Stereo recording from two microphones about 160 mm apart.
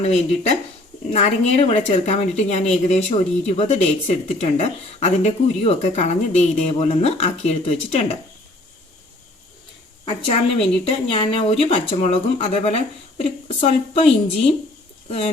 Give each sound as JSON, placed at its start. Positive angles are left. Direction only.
{"t": 0.0, "sound": "a woman's voice", "side_deg": 40}
{"t": 10.8, "sound": "speech", "side_deg": 35}